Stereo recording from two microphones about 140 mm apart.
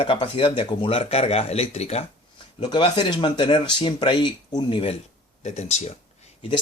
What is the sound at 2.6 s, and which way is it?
Speech, 35° left (ahead or behind).